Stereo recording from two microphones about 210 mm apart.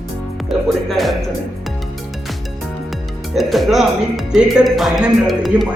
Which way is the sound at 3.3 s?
Centre (ahead or behind).